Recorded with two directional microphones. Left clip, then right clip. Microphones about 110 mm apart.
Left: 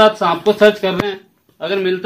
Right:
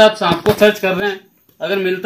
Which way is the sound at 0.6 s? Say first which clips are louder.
Even; 45° right (ahead or behind).